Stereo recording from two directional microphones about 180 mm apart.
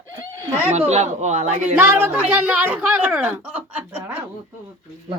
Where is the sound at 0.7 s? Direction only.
40° right (ahead or behind).